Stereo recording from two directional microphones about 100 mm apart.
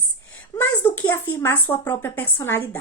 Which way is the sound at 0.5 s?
20° left (ahead or behind).